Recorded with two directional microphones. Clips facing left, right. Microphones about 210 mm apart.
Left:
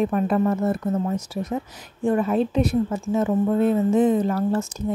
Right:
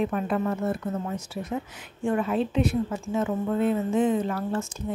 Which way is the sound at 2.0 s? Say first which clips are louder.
Left 4 dB; 35° left (ahead or behind).